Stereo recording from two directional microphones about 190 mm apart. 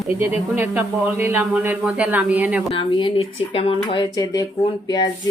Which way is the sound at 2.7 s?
30° left (ahead or behind).